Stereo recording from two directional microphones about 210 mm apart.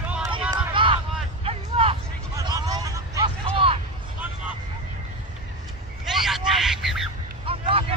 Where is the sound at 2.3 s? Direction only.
20° right (ahead or behind).